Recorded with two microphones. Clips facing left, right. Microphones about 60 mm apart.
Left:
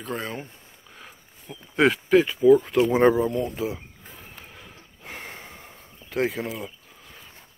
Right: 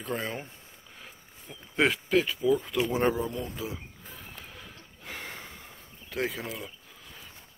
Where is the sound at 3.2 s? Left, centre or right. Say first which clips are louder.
Left 8 dB; left.